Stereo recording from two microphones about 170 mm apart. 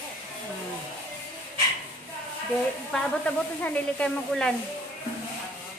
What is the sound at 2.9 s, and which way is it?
Speech, 5° left (ahead or behind).